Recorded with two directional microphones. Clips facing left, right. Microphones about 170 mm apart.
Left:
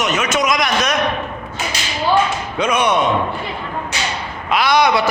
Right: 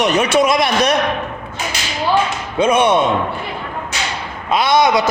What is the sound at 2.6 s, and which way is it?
Speech, 25° right (ahead or behind).